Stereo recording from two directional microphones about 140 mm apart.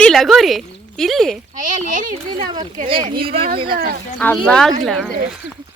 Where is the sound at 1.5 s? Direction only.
65° right (ahead or behind).